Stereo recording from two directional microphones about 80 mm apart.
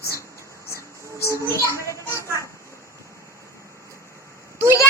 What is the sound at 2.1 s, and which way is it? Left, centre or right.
Children playing, right.